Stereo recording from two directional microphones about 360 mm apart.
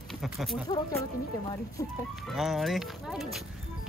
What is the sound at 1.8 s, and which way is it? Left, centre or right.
Speech, centre.